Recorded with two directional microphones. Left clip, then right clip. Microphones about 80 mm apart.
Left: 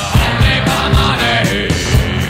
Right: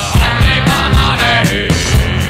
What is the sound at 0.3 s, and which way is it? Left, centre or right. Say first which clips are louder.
Music: right 2 dB; left.